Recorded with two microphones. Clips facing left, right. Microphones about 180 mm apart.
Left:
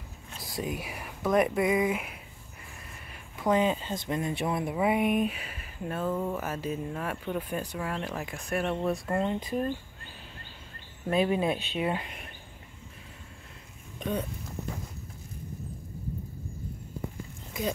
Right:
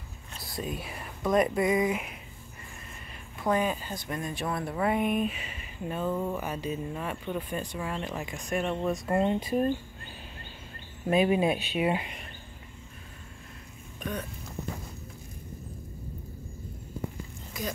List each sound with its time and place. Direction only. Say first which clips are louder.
0.6 s speech: left 1 dB; 15° left (ahead or behind)
3.4 s speech: left 2 dB; 20° left (ahead or behind); by 9.0 s 5° left (ahead or behind)
9.0 s speech: right 3 dB; 20° right (ahead or behind)
11.1 s speech: right 2 dB; 10° right (ahead or behind)
13.9 s a sound: left 4 dB; 25° left (ahead or behind)